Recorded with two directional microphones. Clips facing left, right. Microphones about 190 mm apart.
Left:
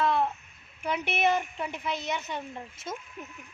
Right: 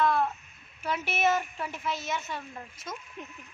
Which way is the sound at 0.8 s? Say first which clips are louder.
Left 1 dB; 15° left (ahead or behind).